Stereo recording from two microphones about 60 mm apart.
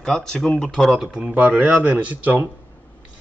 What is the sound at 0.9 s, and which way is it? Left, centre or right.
Speech, centre.